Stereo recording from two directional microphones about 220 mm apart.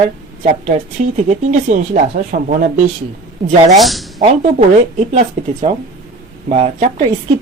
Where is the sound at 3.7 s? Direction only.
Centre (ahead or behind).